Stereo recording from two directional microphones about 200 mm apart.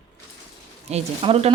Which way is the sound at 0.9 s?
30° right (ahead or behind).